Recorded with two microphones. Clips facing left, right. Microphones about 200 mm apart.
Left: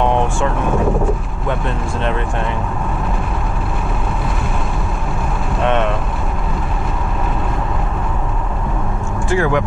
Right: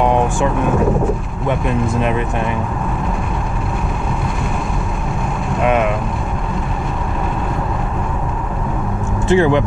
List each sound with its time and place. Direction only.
0.0 s vehicle: 10° right (ahead or behind)
2.0 s speech: 10° right (ahead or behind)
5.6 s speech: 5° right (ahead or behind)
9.3 s speech: 25° right (ahead or behind)